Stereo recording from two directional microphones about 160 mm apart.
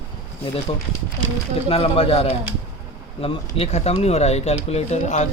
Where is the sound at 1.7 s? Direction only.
35° left (ahead or behind).